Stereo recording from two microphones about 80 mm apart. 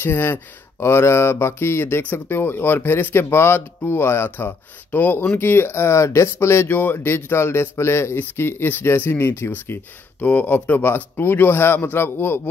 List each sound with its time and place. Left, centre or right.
0.0 s speech: left